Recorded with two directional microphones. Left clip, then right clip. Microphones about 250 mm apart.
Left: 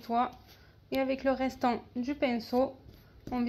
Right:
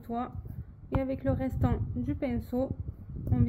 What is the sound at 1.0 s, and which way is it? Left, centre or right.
A woman's voice, centre.